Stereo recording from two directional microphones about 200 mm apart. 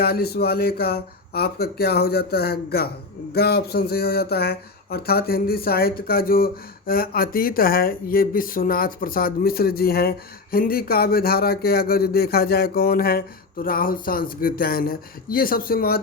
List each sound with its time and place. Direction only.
0.0 s speech: 50° left (ahead or behind)